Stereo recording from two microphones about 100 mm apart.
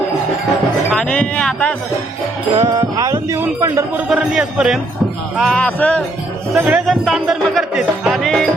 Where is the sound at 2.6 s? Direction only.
35° right (ahead or behind).